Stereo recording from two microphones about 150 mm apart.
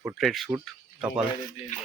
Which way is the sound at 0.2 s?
Centre (ahead or behind).